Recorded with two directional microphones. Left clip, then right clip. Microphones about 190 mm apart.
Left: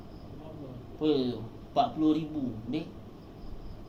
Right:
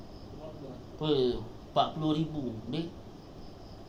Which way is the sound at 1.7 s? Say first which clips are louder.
Left 2 dB; 50° right (ahead or behind).